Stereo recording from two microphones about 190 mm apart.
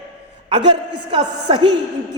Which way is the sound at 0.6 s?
65° right (ahead or behind).